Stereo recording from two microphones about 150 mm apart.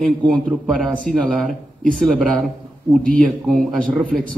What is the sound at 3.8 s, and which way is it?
Speech, 60° right (ahead or behind).